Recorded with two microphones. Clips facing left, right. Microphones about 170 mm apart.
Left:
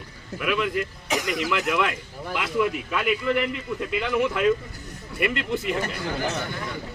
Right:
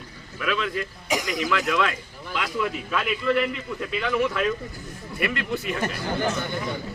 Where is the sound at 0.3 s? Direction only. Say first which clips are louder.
Left 2 dB; 15° left (ahead or behind).